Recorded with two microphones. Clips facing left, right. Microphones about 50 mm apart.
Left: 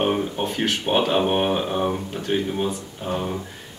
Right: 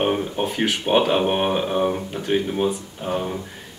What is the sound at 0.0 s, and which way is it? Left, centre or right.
Speech, centre.